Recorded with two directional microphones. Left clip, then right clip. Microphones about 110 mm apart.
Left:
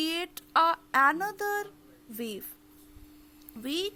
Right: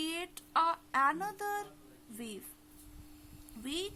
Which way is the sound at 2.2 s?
40° left (ahead or behind).